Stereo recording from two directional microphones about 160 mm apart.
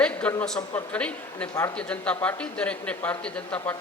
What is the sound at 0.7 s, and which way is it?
A man's voice, 10° left (ahead or behind).